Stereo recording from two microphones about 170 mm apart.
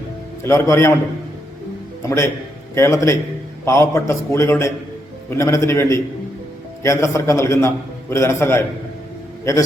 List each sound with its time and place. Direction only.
0.4 s a man's voice: 15° left (ahead or behind)
2.0 s a man's voice: 15° left (ahead or behind)